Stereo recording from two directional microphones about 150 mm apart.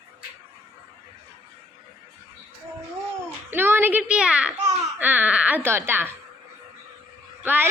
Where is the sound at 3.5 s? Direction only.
15° right (ahead or behind).